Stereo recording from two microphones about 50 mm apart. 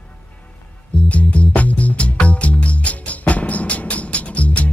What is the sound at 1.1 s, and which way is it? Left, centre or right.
Music, left.